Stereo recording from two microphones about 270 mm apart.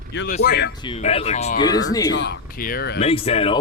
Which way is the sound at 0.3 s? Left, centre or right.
Left.